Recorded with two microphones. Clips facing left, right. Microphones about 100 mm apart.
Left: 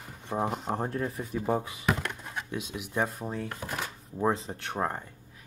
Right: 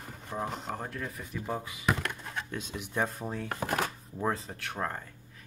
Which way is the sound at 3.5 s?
55° right (ahead or behind).